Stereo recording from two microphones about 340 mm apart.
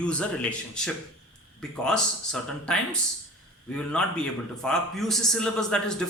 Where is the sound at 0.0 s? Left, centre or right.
Centre.